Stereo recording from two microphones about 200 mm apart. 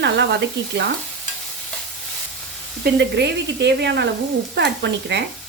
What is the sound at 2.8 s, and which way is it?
Speech, 60° right (ahead or behind).